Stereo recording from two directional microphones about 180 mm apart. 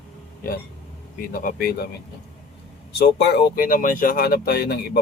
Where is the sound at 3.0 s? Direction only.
65° left (ahead or behind).